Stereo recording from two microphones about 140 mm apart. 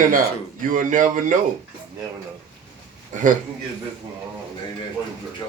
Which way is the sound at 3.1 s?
65° right (ahead or behind).